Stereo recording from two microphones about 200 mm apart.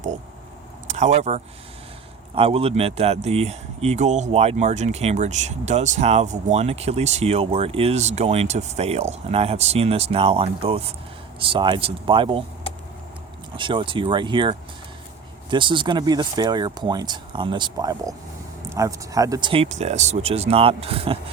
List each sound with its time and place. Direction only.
0.9 s speech: 35° right (ahead or behind)
13.6 s speech: 25° right (ahead or behind)